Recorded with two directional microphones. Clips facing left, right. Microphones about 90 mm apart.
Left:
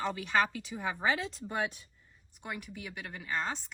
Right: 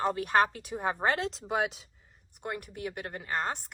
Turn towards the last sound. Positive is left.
turn(degrees=-50)  # may be behind; listen again after turning